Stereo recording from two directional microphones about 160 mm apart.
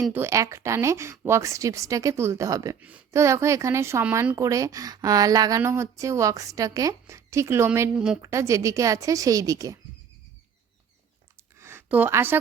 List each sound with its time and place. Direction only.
0.1 s speech: 15° right (ahead or behind)
7.9 s a woman's voice: 5° right (ahead or behind)
8.2 s speech: 20° right (ahead or behind)
11.6 s a sound: 15° right (ahead or behind)